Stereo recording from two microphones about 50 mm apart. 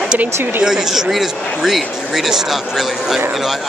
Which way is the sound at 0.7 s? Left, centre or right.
Centre.